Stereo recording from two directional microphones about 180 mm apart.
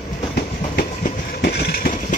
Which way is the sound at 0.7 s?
60° left (ahead or behind).